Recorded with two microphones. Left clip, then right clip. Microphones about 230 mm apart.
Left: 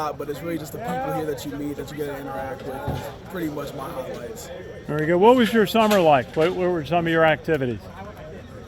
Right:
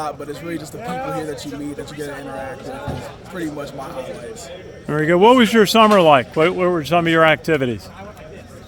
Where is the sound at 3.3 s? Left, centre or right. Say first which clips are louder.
Right 2 dB; centre.